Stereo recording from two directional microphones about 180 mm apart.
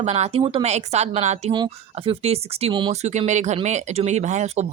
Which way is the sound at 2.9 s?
40° right (ahead or behind).